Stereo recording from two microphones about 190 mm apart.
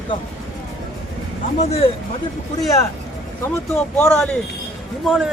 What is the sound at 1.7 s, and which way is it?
Speech, 30° left (ahead or behind).